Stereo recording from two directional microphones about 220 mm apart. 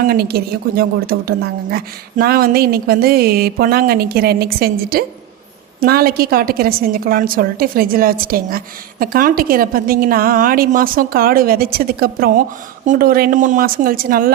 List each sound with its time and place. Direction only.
0.0 s a woman's voice: 45° right (ahead or behind)